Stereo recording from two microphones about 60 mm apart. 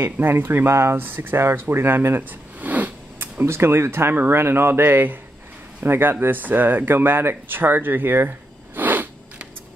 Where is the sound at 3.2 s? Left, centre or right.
Right.